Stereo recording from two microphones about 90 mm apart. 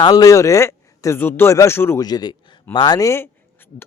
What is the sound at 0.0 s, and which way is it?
A man's voice, 45° left (ahead or behind).